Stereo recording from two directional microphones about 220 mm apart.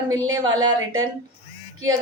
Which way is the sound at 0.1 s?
15° right (ahead or behind).